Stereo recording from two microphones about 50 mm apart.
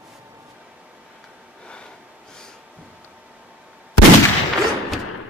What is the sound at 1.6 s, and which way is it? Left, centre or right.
Snort, centre.